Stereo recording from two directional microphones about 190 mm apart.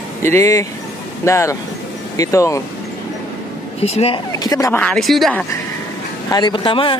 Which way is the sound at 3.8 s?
35° left (ahead or behind).